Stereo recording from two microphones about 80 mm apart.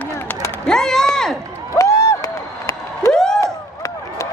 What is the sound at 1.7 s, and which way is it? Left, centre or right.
Crowd, left.